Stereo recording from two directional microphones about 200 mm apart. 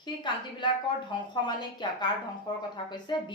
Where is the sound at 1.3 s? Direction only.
20° left (ahead or behind).